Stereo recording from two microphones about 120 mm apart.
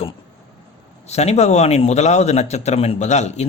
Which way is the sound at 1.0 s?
65° left (ahead or behind).